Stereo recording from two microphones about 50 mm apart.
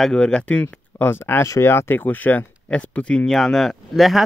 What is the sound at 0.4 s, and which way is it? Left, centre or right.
Speech, left.